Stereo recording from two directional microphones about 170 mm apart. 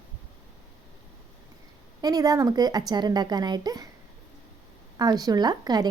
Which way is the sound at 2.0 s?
20° right (ahead or behind).